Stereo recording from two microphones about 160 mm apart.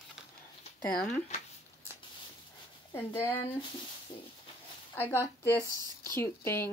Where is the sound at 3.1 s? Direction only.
15° left (ahead or behind).